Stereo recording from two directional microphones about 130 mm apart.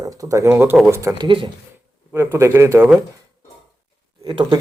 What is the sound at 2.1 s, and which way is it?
Speech, 20° right (ahead or behind).